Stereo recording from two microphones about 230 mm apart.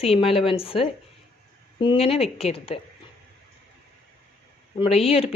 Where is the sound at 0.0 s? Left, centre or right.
Left.